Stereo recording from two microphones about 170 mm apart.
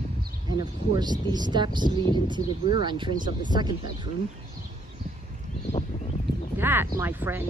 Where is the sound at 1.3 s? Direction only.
25° right (ahead or behind).